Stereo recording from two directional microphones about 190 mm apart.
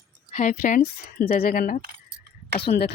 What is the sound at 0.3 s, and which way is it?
Speech, 40° left (ahead or behind).